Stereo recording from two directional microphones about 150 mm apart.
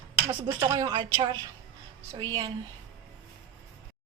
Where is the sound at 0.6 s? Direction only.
25° right (ahead or behind).